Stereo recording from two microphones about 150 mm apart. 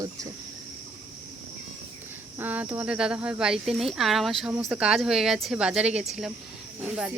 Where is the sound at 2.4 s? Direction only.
10° right (ahead or behind).